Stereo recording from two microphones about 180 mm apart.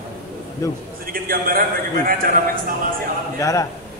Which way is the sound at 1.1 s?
55° right (ahead or behind).